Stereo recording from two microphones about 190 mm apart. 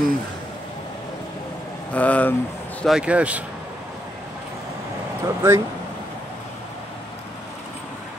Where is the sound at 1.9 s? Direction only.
10° left (ahead or behind).